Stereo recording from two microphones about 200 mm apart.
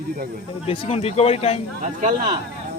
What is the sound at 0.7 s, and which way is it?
Speech, 30° left (ahead or behind).